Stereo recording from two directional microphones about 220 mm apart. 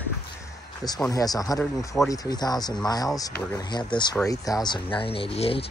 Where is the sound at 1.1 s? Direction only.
15° left (ahead or behind).